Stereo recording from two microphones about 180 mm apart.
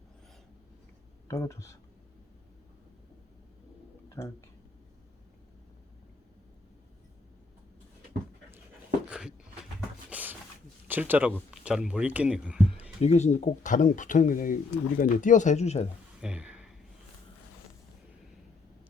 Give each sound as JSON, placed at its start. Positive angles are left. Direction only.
{"t": 1.3, "sound": "speech", "side_deg": 15}
{"t": 4.1, "sound": "speech", "side_deg": 15}
{"t": 9.0, "sound": "a sound", "side_deg": -5}
{"t": 10.8, "sound": "speech", "side_deg": -10}
{"t": 13.0, "sound": "speech", "side_deg": 40}
{"t": 16.2, "sound": "a sound", "side_deg": -5}